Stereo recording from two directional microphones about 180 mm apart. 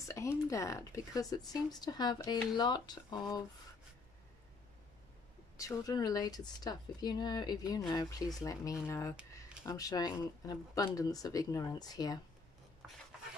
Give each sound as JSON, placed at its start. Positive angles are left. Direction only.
{"t": 0.1, "sound": "speech", "side_deg": 15}
{"t": 5.6, "sound": "speech", "side_deg": 20}